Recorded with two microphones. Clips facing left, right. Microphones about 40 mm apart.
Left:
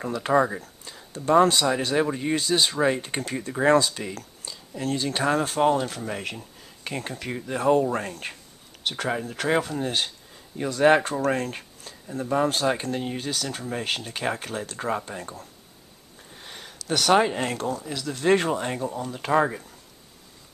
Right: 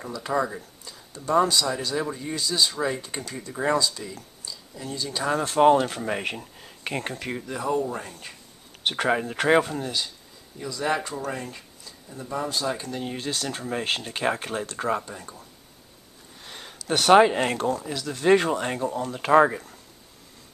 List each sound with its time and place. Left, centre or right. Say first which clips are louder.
0.3 s speech: left 5 dB; left
1.4 s speech: left 3 dB; left
5.6 s speech: right 4 dB; centre
7.2 s speech: even; centre
7.5 s speech: left 6 dB; left
8.2 s speech: left 6 dB; left
8.8 s speech: right 4 dB; right
9.8 s speech: left 3 dB; left
13.0 s speech: even; centre
15.0 s speech: left 3 dB; left
16.9 s speech: right 4 dB; centre
17.8 s speech: even; centre